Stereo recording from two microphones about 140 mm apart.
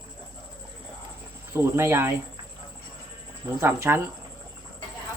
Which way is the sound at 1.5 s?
20° right (ahead or behind).